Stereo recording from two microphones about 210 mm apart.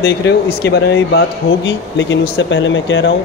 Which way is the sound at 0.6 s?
50° left (ahead or behind).